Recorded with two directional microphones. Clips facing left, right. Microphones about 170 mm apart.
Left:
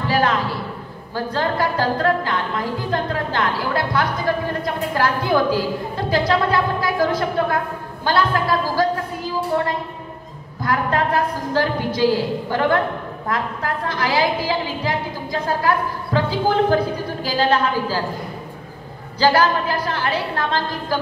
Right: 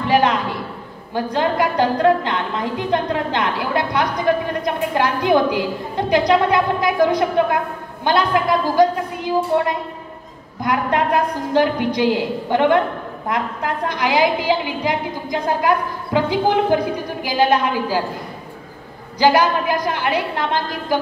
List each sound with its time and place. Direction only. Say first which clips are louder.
0.0 s a man's voice: right 3 dB; 20° right (ahead or behind)
19.1 s a woman's voice: right 1 dB; 15° right (ahead or behind)